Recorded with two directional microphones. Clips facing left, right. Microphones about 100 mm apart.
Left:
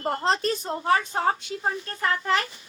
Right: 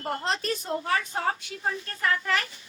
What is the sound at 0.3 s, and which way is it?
A woman's voice, 35° left (ahead or behind).